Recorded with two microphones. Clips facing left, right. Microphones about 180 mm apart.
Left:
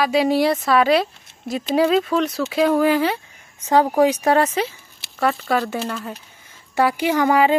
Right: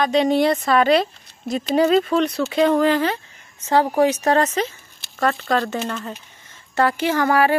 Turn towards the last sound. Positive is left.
turn(degrees=15)  # may be behind; listen again after turning